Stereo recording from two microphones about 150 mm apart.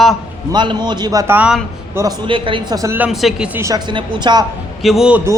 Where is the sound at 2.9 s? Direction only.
5° right (ahead or behind).